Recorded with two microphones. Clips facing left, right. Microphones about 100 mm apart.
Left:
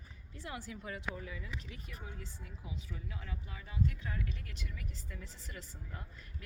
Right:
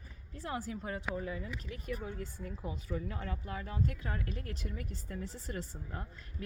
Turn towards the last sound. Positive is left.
turn(degrees=-40)  # may be behind; listen again after turning